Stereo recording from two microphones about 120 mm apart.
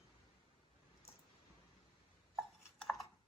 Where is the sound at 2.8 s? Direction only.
Centre (ahead or behind).